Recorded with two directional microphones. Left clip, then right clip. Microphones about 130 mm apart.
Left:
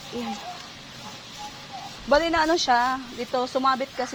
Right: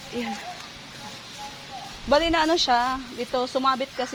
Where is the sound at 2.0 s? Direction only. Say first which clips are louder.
Even; 15° right (ahead or behind).